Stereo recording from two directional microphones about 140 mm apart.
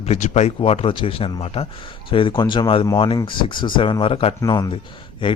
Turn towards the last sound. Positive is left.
turn(degrees=35)  # may be behind; listen again after turning